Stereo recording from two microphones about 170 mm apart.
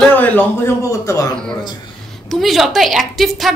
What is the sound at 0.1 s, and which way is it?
A man's voice, 10° left (ahead or behind).